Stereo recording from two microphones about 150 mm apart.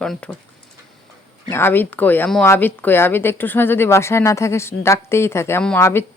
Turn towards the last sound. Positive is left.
turn(degrees=15)  # may be behind; listen again after turning